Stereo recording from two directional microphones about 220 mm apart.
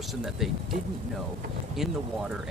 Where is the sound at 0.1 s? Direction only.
Centre (ahead or behind).